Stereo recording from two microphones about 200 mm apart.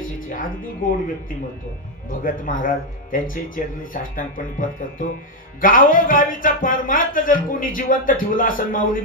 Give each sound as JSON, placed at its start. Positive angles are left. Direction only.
{"t": 0.3, "sound": "a man's voice", "side_deg": 45}